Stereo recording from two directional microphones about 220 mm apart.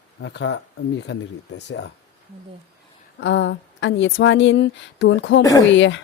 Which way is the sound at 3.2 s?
55° left (ahead or behind).